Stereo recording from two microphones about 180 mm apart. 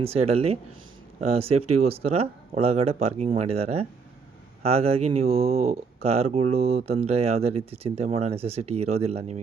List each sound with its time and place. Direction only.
0.0 s speech: 35° right (ahead or behind)